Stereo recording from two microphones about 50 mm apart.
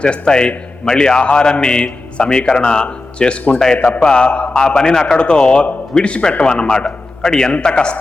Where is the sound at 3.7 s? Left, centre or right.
Left.